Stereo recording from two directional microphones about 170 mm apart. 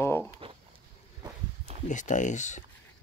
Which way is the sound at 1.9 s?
45° left (ahead or behind).